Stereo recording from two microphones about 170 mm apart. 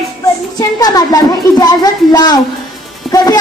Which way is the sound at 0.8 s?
20° left (ahead or behind).